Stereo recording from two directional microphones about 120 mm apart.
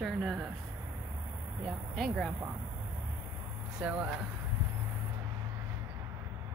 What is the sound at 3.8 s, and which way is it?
Speech, 15° right (ahead or behind).